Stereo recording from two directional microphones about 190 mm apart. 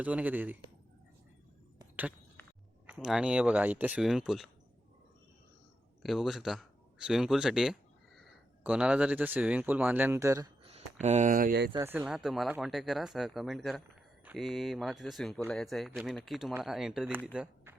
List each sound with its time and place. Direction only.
0.0 s a man's voice: 10° right (ahead or behind)
2.8 s speech: 5° right (ahead or behind)
6.0 s speech: centre (ahead or behind); by 10.5 s 15° right (ahead or behind)
10.6 s speech: 35° right (ahead or behind); by 11.7 s 50° right (ahead or behind)
11.8 s speech: 10° right (ahead or behind)
17.3 s a sound: 5° right (ahead or behind)